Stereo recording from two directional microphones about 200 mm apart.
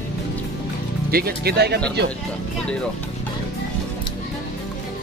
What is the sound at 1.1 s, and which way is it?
Speech, 50° right (ahead or behind).